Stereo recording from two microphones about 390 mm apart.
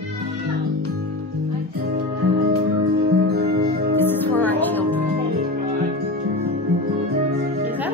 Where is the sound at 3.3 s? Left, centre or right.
Centre.